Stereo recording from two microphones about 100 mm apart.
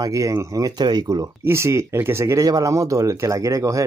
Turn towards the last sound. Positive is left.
turn(degrees=-35)  # may be behind; listen again after turning